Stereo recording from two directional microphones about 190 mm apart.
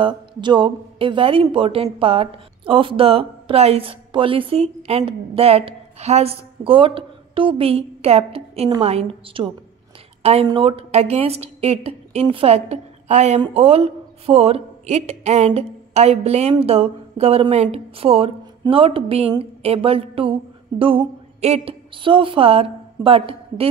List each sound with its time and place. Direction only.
0.0 s a woman's voice: 25° right (ahead or behind)